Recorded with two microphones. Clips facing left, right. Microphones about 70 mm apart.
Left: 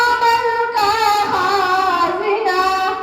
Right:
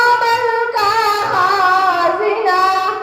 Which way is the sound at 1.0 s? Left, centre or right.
Right.